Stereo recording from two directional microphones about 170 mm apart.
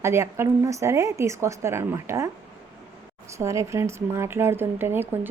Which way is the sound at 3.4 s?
15° right (ahead or behind).